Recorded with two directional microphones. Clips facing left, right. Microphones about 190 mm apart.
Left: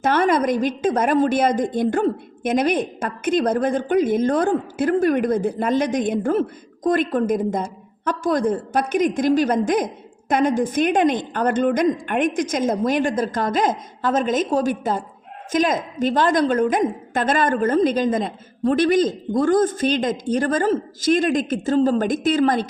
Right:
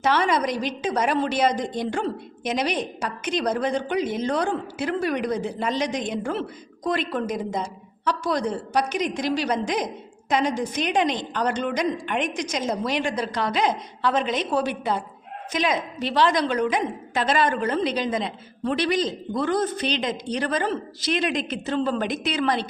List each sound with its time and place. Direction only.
0.0 s a woman's voice: 50° left (ahead or behind)